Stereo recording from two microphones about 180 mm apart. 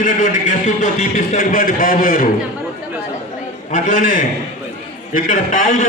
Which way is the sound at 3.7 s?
45° left (ahead or behind).